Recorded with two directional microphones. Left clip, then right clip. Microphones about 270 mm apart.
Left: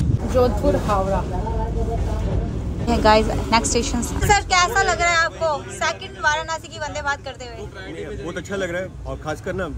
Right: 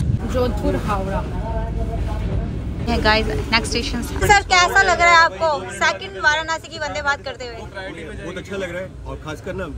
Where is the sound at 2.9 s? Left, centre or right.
Centre.